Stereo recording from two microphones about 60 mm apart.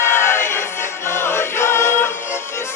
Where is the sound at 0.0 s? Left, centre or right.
Left.